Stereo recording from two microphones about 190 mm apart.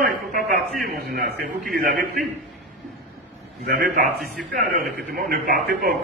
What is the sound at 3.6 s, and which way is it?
Speech, 50° right (ahead or behind).